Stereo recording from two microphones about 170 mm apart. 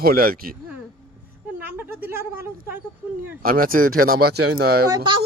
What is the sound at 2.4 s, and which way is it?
Speech, 15° right (ahead or behind).